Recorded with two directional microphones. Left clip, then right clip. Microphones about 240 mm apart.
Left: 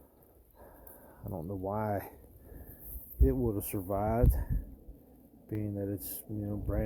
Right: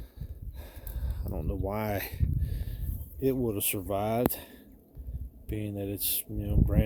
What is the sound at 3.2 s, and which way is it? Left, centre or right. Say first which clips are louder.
Speech: right 3 dB; right.